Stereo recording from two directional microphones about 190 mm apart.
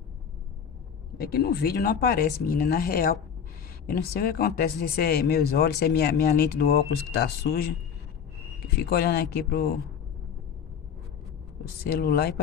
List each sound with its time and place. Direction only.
1.1 s speech: 55° left (ahead or behind)
8.7 s speech: 55° left (ahead or behind)
11.8 s speech: 55° left (ahead or behind)